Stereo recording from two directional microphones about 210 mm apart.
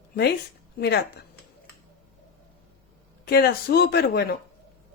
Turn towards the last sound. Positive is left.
turn(degrees=50)  # may be behind; listen again after turning